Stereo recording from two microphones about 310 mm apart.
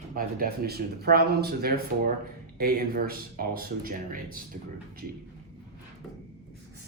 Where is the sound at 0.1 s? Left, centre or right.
Right.